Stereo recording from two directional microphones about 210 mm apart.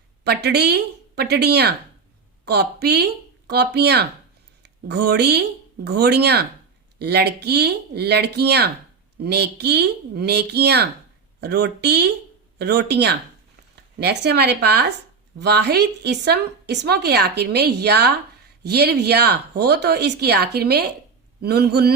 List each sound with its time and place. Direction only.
0.3 s a woman's voice: 50° right (ahead or behind)